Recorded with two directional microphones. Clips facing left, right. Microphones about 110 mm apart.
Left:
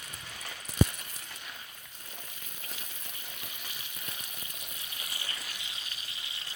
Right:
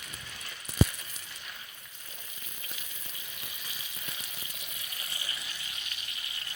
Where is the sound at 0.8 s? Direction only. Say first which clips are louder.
Even; 90° right.